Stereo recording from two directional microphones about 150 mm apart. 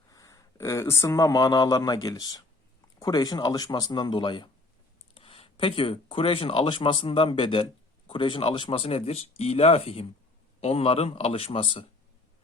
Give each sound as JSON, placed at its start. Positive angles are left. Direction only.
{"t": 0.1, "sound": "speech", "side_deg": 20}